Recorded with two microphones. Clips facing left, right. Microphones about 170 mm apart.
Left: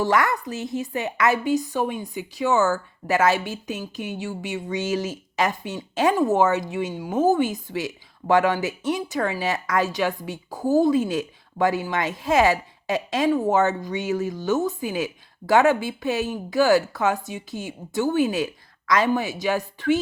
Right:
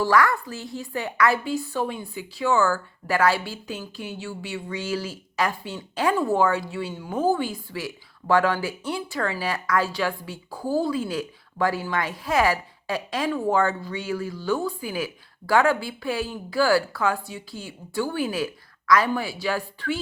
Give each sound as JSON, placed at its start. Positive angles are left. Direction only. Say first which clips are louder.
{"t": 0.0, "sound": "a woman's voice", "louder": "right 1 dB", "side_deg": 20}